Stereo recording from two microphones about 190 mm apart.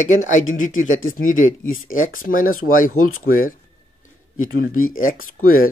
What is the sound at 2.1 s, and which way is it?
Speech, 45° left (ahead or behind).